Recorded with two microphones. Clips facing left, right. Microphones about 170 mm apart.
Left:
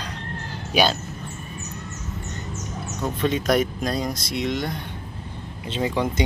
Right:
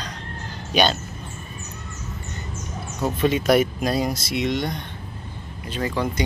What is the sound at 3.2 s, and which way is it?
Speech, 5° right (ahead or behind).